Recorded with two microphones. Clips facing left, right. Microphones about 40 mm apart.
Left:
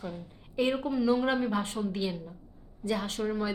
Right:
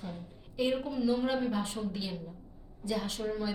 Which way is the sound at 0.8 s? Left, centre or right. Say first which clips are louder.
Left 4 dB; left.